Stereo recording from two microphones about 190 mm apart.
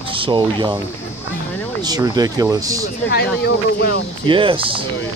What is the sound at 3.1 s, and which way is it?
Speech, 55° left (ahead or behind).